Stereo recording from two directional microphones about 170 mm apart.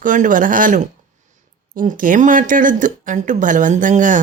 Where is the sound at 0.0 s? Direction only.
50° right (ahead or behind).